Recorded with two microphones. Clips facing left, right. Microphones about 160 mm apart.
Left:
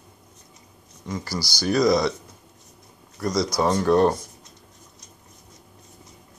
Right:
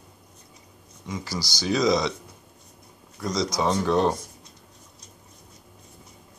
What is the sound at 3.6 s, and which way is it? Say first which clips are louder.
Speech: left 4 dB; 10° left (ahead or behind).